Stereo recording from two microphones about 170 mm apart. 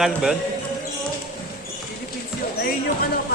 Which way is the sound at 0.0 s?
Centre (ahead or behind).